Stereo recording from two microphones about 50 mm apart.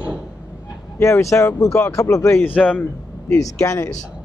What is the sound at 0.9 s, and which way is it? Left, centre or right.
Speech, left.